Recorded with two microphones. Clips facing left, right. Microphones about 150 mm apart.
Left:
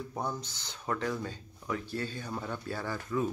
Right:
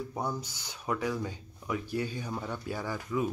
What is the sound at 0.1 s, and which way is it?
Speech, 10° right (ahead or behind).